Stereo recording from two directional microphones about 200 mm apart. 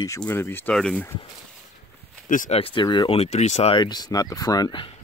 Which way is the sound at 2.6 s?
25° left (ahead or behind).